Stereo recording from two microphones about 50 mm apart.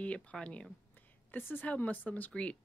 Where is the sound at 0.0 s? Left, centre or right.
Left.